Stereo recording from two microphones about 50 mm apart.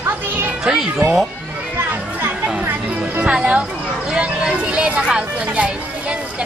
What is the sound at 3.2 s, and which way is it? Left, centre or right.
Speech, right.